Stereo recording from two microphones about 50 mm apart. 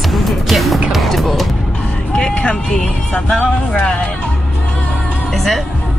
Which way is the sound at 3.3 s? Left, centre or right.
Centre.